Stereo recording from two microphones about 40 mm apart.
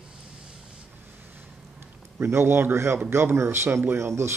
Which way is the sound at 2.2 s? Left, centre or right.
Right.